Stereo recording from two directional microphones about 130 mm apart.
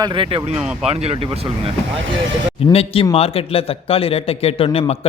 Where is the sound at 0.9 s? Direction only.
50° right (ahead or behind).